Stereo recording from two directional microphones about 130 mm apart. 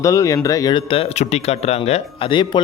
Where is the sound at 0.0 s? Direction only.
25° left (ahead or behind).